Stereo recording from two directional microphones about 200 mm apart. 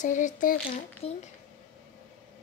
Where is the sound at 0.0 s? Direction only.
40° left (ahead or behind).